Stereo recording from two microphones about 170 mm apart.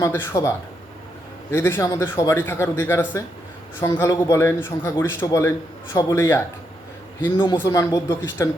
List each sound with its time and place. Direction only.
0.0 s a man's voice: 15° left (ahead or behind)
7.5 s speech: 15° left (ahead or behind)